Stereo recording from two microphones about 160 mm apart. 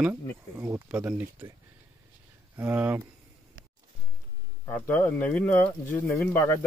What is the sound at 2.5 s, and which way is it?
Speech, 10° right (ahead or behind).